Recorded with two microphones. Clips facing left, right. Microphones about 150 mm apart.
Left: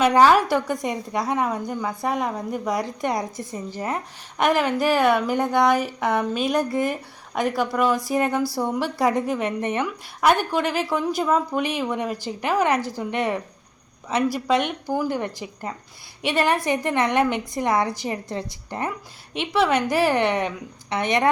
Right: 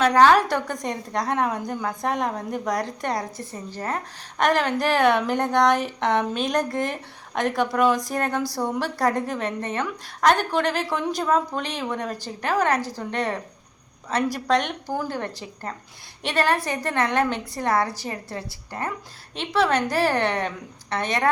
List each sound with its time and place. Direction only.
0.0 s a woman's voice: 10° left (ahead or behind)
8.4 s a woman's voice: 15° right (ahead or behind)
8.8 s a woman's voice: 10° left (ahead or behind)